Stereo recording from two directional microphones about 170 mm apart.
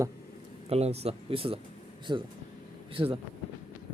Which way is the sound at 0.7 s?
40° right (ahead or behind).